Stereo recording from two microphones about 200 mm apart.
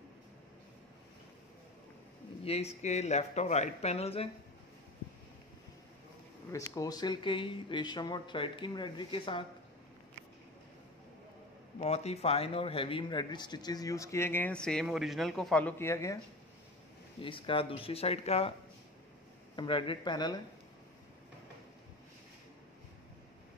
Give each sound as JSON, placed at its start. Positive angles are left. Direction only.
{"t": 2.4, "sound": "speech", "side_deg": 30}
{"t": 6.7, "sound": "speech", "side_deg": 20}
{"t": 11.8, "sound": "speech", "side_deg": 30}
{"t": 17.2, "sound": "speech", "side_deg": 25}
{"t": 19.5, "sound": "speech", "side_deg": 25}